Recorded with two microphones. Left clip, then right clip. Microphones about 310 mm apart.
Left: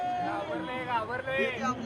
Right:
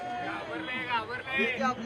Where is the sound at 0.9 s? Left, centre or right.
Centre.